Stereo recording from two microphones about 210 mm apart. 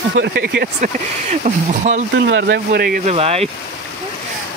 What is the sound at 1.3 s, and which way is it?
Speech, 35° right (ahead or behind).